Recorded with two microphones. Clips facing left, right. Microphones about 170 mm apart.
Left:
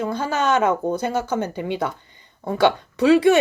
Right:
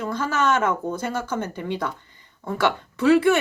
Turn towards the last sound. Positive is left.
turn(degrees=15)  # may be behind; listen again after turning